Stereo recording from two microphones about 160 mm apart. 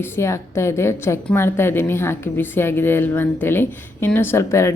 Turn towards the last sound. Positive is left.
turn(degrees=15)  # may be behind; listen again after turning